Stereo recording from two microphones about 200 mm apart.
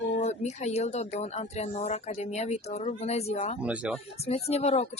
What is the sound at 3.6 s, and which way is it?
Speech, 5° right (ahead or behind).